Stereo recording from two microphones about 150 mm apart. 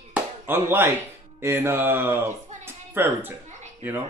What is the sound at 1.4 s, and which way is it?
Speech, 15° right (ahead or behind).